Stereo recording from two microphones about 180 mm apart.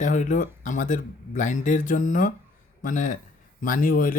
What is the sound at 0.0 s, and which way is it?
Speech, 45° left (ahead or behind).